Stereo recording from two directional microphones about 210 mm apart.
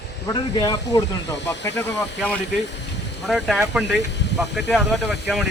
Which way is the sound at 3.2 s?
Centre (ahead or behind).